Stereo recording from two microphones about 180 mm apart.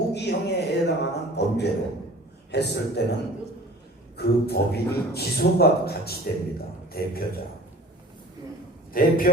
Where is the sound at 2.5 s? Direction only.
70° left (ahead or behind).